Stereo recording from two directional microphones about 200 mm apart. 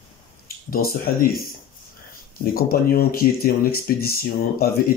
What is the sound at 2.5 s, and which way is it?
Speech, 50° left (ahead or behind).